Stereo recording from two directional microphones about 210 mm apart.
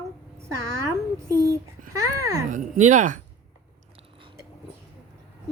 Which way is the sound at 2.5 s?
35° right (ahead or behind).